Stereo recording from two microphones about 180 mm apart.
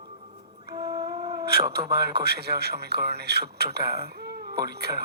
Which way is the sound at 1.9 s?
65° right (ahead or behind).